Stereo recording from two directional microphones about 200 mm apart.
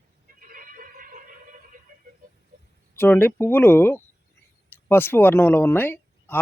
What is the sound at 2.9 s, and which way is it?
Speech, 10° left (ahead or behind).